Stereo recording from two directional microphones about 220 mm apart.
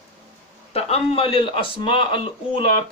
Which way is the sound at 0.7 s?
25° left (ahead or behind).